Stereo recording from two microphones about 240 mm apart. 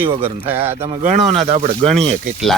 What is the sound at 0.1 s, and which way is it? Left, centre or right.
Speech, right.